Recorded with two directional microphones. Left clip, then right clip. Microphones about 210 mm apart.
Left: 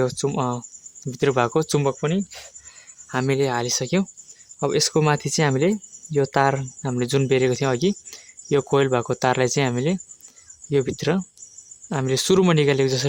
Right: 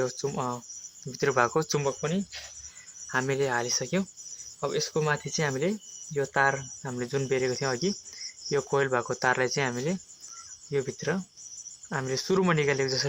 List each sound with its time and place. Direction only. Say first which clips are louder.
0.0 s speech: left 7 dB; 45° left (ahead or behind)
1.6 s speech: left 6 dB; 60° left (ahead or behind)